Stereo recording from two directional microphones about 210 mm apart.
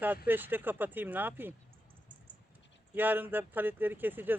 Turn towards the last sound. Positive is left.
turn(degrees=-10)  # may be behind; listen again after turning